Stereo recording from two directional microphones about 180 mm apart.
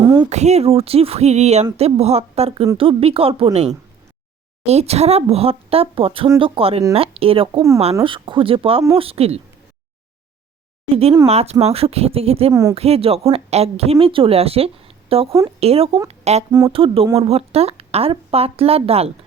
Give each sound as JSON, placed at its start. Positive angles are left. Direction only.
{"t": 0.0, "sound": "a sound", "side_deg": -20}
{"t": 0.3, "sound": "speech", "side_deg": -40}
{"t": 11.3, "sound": "speech", "side_deg": -35}
{"t": 16.5, "sound": "speech", "side_deg": -20}
{"t": 16.7, "sound": "speech", "side_deg": -30}